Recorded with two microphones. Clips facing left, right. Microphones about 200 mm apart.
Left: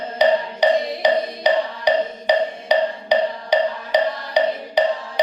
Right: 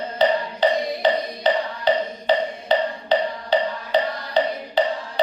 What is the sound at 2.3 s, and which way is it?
Wood block, 15° left (ahead or behind).